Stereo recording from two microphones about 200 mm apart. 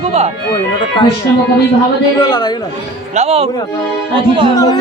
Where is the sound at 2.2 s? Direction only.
20° left (ahead or behind).